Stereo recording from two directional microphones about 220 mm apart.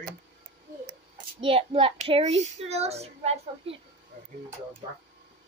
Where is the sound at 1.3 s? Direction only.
25° right (ahead or behind).